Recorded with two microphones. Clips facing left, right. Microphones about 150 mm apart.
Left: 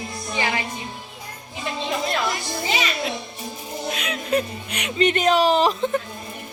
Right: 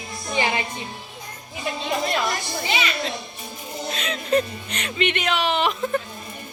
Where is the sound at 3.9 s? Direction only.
10° left (ahead or behind).